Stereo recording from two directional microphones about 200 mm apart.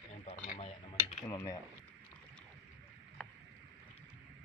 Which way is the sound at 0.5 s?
30° left (ahead or behind).